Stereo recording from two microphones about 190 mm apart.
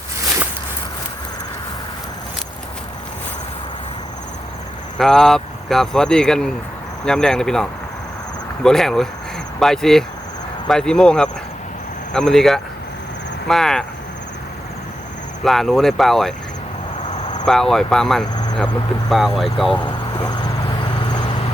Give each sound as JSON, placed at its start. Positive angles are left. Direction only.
{"t": 4.9, "sound": "speech", "side_deg": 0}
{"t": 15.4, "sound": "speech", "side_deg": 0}
{"t": 17.4, "sound": "speech", "side_deg": 0}
{"t": 18.3, "sound": "cricket", "side_deg": 20}
{"t": 19.0, "sound": "speech", "side_deg": 0}
{"t": 19.8, "sound": "vehicle", "side_deg": 25}